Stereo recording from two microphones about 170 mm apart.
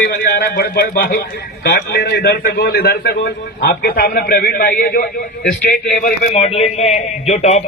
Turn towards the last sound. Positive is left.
turn(degrees=40)  # may be behind; listen again after turning